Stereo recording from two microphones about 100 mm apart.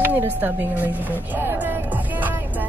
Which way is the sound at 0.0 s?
20° right (ahead or behind).